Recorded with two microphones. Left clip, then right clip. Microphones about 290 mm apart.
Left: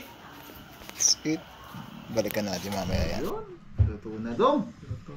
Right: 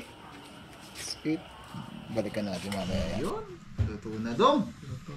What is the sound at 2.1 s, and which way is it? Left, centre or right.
Speech, centre.